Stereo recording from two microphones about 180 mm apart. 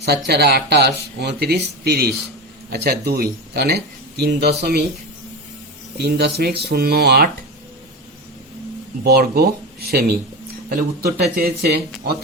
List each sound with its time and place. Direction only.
0.3 s speech: 65° right (ahead or behind)
6.0 s speech: 65° right (ahead or behind)
9.0 s speech: 60° right (ahead or behind)